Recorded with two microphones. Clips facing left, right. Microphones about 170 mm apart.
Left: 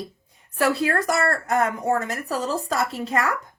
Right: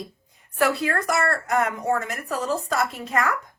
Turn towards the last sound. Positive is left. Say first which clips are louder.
# left 1 dB
turn(degrees=30)  # may be behind; listen again after turning